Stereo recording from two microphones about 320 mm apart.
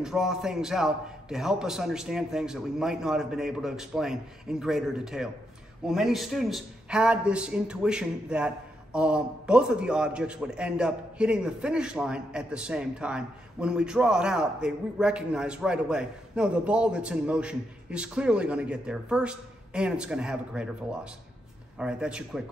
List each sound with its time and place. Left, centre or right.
0.0 s a man's voice: centre